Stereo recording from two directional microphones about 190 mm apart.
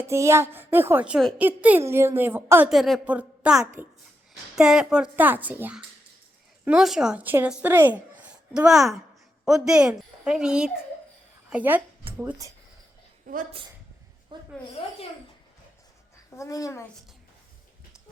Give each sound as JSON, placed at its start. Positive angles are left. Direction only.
{"t": 0.0, "sound": "a woman's voice", "side_deg": -15}
{"t": 13.2, "sound": "a woman's voice", "side_deg": -45}
{"t": 14.3, "sound": "a sound", "side_deg": -25}
{"t": 16.3, "sound": "a child's voice", "side_deg": 15}